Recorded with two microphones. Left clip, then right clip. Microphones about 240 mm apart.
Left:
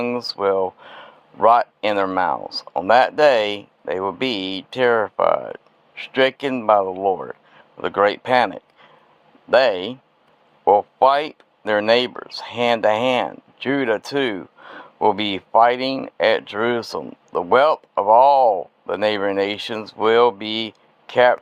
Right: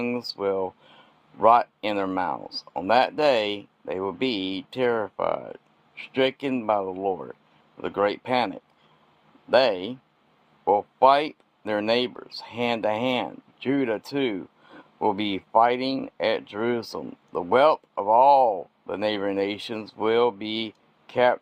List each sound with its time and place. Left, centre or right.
0.0 s speech: centre